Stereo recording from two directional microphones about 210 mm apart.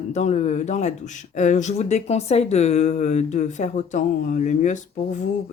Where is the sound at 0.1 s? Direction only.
35° left (ahead or behind).